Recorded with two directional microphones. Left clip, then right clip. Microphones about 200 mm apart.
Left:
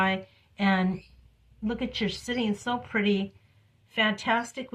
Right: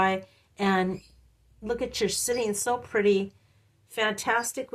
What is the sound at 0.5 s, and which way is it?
A woman's voice, 35° right (ahead or behind).